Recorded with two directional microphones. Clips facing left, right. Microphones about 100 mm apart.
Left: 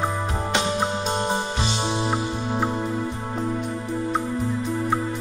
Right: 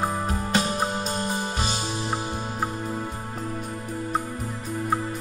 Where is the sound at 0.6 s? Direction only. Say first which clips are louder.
Left 1 dB; 25° left (ahead or behind).